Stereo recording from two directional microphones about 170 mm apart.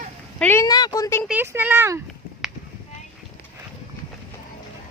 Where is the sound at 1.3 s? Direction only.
10° right (ahead or behind).